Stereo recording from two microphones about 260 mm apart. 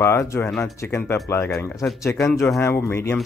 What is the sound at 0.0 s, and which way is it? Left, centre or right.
Speech, centre.